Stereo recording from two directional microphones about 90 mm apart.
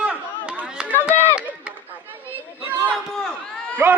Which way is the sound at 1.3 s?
15° right (ahead or behind).